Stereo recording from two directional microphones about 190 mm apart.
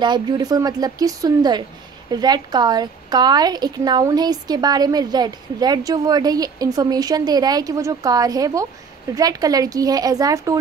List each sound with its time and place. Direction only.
0.0 s a woman's voice: 25° right (ahead or behind)